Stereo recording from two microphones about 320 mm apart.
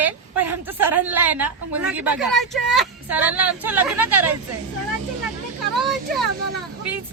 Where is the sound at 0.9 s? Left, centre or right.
Centre.